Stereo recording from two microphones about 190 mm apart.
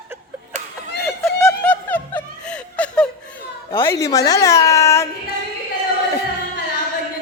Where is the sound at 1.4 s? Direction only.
10° left (ahead or behind).